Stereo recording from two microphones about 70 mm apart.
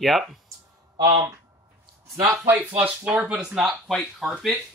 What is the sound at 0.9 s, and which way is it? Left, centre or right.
Speech, right.